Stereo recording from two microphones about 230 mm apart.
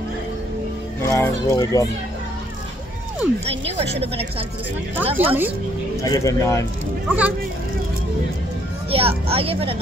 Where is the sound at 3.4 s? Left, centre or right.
Right.